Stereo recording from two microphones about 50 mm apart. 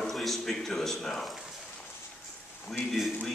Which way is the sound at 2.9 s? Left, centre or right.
Centre.